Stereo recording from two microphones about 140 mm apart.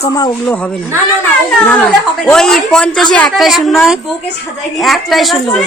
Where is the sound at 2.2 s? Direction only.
5° left (ahead or behind).